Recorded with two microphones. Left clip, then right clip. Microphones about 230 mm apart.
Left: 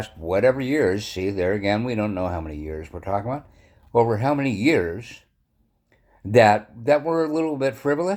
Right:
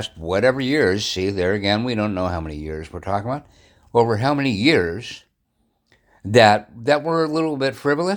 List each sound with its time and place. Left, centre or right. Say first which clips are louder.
0.0 s speech: right 1 dB; right
6.3 s speech: right 2 dB; right